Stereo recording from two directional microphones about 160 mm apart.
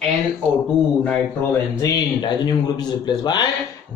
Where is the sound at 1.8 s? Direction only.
25° left (ahead or behind).